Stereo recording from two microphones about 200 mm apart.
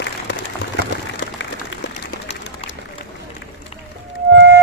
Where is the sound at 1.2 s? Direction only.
65° left (ahead or behind).